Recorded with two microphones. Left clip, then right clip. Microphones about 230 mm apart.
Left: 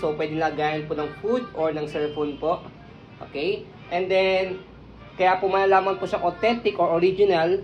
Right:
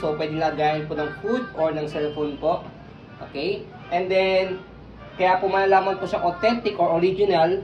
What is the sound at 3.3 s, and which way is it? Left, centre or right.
Speech, left.